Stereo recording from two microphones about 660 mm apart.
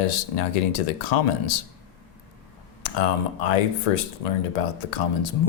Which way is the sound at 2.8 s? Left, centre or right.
Left.